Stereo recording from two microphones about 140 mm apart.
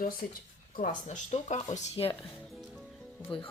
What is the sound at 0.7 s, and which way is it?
Speech, 65° left (ahead or behind).